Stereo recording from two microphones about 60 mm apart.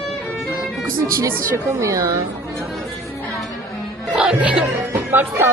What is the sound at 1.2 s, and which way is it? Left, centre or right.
Speech, right.